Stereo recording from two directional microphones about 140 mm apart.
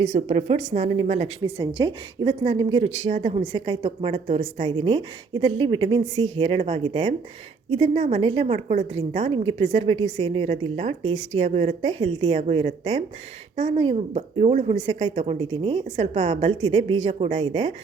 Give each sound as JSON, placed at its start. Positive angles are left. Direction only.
{"t": 0.0, "sound": "a woman's voice", "side_deg": -50}
{"t": 4.8, "sound": "a woman's voice", "side_deg": -40}
{"t": 9.3, "sound": "a woman's voice", "side_deg": -40}
{"t": 10.0, "sound": "a woman's voice", "side_deg": -35}